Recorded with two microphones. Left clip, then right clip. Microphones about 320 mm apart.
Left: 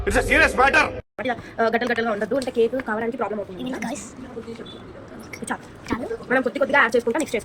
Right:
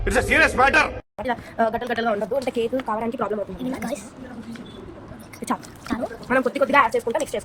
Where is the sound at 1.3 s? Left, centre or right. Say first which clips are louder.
Left 1 dB; right.